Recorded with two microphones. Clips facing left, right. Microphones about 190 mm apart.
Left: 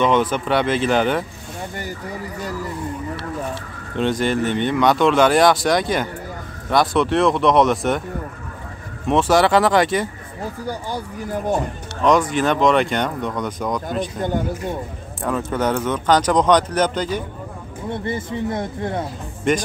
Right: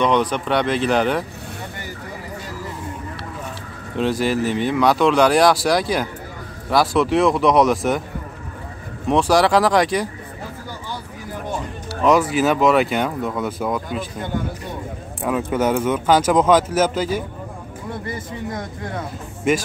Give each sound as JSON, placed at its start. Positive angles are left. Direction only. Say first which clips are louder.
{"t": 0.0, "sound": "speech", "louder": "left 1 dB", "side_deg": 0}
{"t": 3.9, "sound": "speech", "louder": "even", "side_deg": 0}
{"t": 9.0, "sound": "speech", "louder": "even", "side_deg": 0}
{"t": 11.9, "sound": "speech", "louder": "right 1 dB", "side_deg": -5}
{"t": 15.2, "sound": "speech", "louder": "right 1 dB", "side_deg": -10}
{"t": 18.0, "sound": "speech", "louder": "left 5 dB", "side_deg": 25}
{"t": 19.5, "sound": "speech", "louder": "even", "side_deg": -5}